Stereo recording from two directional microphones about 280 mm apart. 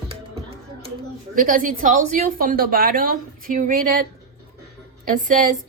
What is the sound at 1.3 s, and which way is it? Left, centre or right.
A woman's voice, right.